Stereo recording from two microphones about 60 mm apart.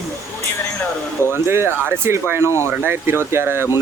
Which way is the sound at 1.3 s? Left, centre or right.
Right.